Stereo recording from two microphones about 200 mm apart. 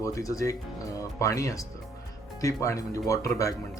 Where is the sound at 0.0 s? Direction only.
15° left (ahead or behind).